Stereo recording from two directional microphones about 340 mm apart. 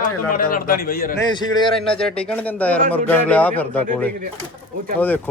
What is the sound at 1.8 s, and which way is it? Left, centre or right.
A man's voice, centre.